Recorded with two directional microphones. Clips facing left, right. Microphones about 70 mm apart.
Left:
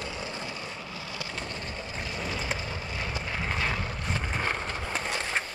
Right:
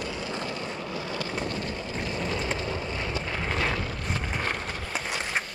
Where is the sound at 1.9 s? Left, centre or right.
Centre.